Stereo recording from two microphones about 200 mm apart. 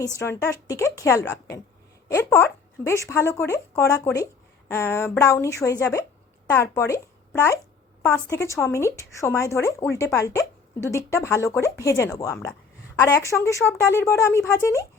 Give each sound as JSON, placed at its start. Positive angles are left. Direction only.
{"t": 0.2, "sound": "speech", "side_deg": 15}